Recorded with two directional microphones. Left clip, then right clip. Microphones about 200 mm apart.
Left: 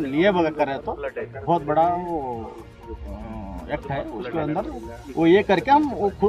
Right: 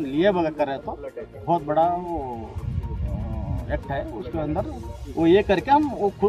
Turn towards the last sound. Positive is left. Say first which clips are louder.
# left 1 dB
turn(degrees=0)  # may be behind; listen again after turning